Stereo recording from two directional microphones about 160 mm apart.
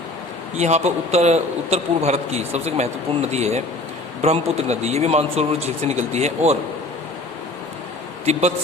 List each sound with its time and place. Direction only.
0.5 s a man's voice: 45° right (ahead or behind)
8.2 s a man's voice: 45° right (ahead or behind)